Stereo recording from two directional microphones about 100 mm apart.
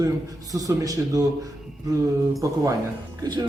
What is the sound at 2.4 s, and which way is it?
Speech, 35° right (ahead or behind).